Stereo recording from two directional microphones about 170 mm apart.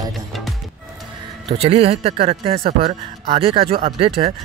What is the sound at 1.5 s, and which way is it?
Speech, 35° right (ahead or behind).